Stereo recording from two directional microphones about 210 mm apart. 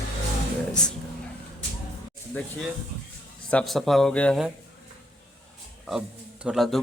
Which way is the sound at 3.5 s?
Centre (ahead or behind).